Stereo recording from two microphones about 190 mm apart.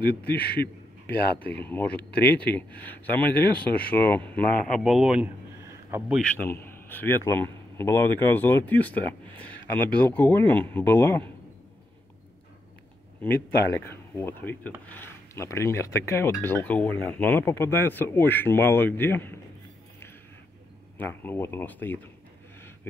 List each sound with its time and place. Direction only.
0.0 s a man's voice: 55° left (ahead or behind)
0.5 s a sound: 55° left (ahead or behind)
1.5 s a man's voice: 10° left (ahead or behind); by 6.1 s 10° right (ahead or behind)
6.1 s a man's voice: 5° left (ahead or behind)
13.2 s a man's voice: 10° left (ahead or behind)
21.0 s a man's voice: 10° left (ahead or behind)